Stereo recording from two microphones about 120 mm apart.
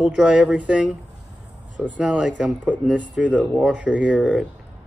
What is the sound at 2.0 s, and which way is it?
Speech, 5° right (ahead or behind).